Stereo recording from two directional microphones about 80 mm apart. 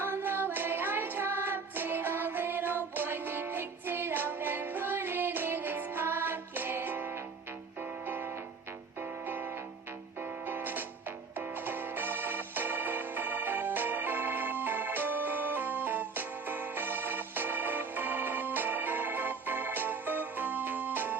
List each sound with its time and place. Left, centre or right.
0.0 s music: right